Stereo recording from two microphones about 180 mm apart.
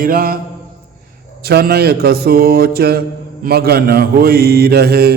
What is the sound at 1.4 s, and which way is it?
A man's voice, 60° right (ahead or behind).